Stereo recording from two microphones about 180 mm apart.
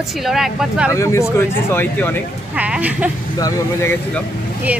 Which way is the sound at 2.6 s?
10° right (ahead or behind).